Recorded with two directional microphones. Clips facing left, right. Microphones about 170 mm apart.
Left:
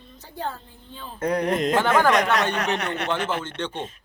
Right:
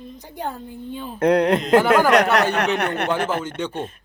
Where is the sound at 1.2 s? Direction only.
65° right (ahead or behind).